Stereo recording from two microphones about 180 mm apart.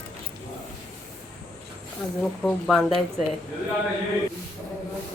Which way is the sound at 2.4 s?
Centre (ahead or behind).